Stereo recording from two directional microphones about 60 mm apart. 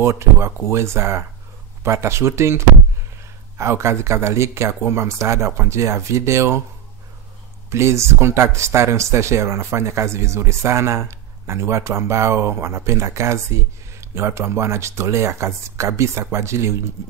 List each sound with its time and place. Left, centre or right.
0.0 s speech: right
7.7 s speech: right